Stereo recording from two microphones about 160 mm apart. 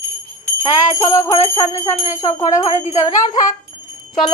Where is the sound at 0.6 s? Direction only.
20° left (ahead or behind).